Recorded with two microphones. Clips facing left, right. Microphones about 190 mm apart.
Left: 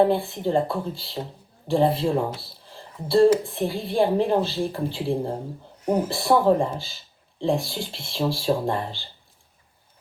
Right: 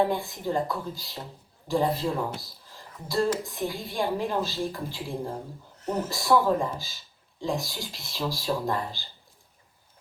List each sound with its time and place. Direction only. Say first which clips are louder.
0.0 s a woman's voice: left 6 dB; 30° left (ahead or behind)
5.8 s speech: left 6 dB; 10° left (ahead or behind)
6.1 s a woman's voice: left 2 dB; 30° left (ahead or behind)